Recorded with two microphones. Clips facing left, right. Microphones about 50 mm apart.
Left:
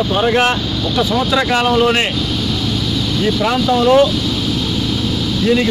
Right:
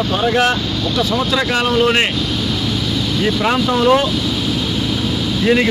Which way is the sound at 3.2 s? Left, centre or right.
Centre.